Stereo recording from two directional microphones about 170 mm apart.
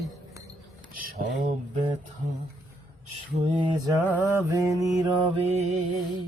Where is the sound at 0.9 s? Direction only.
60° right (ahead or behind).